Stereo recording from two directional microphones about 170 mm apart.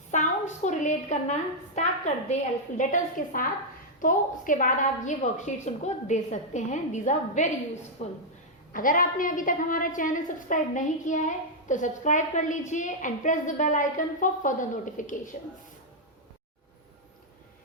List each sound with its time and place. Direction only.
0.1 s a woman's voice: 45° left (ahead or behind)
8.7 s a woman's voice: 55° left (ahead or behind)